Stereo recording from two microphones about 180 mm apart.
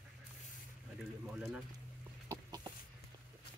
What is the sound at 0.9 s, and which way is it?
Speech, 5° right (ahead or behind).